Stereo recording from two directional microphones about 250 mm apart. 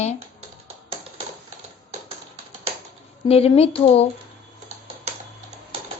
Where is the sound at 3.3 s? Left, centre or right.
Left.